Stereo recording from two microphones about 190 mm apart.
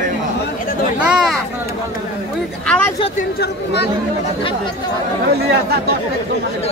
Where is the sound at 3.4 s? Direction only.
60° left (ahead or behind).